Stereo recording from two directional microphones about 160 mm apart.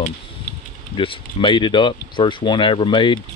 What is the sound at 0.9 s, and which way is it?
Speech, 30° left (ahead or behind).